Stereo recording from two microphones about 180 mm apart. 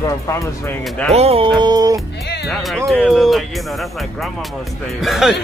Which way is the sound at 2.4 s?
Centre (ahead or behind).